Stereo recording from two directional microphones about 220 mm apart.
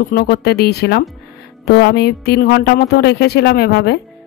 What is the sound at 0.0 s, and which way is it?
Speech, 45° left (ahead or behind).